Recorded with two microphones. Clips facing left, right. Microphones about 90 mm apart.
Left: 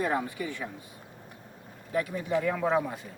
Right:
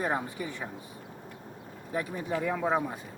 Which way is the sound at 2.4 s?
10° right (ahead or behind).